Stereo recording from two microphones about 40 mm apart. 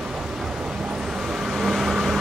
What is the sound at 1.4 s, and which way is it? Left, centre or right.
Vehicle, centre.